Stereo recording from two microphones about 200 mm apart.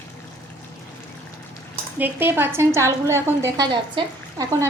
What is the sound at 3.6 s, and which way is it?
Speech, 25° right (ahead or behind).